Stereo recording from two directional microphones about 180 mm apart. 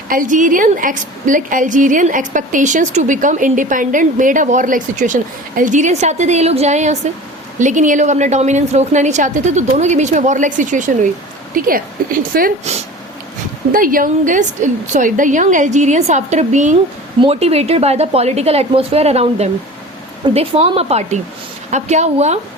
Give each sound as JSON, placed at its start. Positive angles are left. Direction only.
{"t": 0.1, "sound": "a woman's voice", "side_deg": -45}
{"t": 13.7, "sound": "a woman's voice", "side_deg": -50}